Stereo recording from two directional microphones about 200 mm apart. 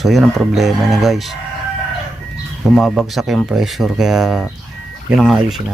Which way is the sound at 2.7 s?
Centre (ahead or behind).